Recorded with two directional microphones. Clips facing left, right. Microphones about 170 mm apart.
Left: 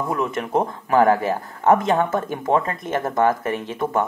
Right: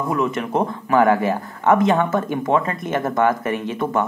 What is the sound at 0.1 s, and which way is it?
Speech, 40° left (ahead or behind).